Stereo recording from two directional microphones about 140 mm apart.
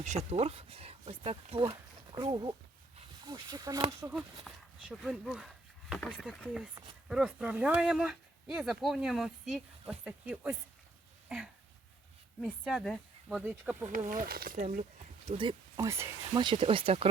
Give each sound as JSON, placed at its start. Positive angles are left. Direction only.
{"t": 0.0, "sound": "speech", "side_deg": -55}
{"t": 4.4, "sound": "speech", "side_deg": -5}
{"t": 6.0, "sound": "speech", "side_deg": 10}
{"t": 11.3, "sound": "a sound", "side_deg": -10}
{"t": 12.4, "sound": "speech", "side_deg": -5}
{"t": 13.4, "sound": "speech", "side_deg": -10}
{"t": 13.9, "sound": "speech", "side_deg": -75}
{"t": 15.3, "sound": "speech", "side_deg": -35}
{"t": 16.4, "sound": "speech", "side_deg": -35}